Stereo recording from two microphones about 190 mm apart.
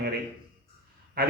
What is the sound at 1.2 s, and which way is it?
Speech, 50° right (ahead or behind).